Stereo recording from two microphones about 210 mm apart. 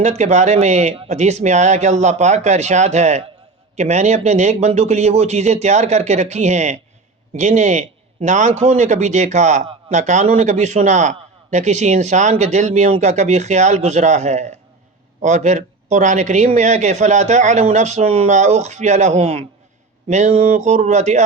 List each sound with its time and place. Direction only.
0.0 s a man's voice: 35° right (ahead or behind)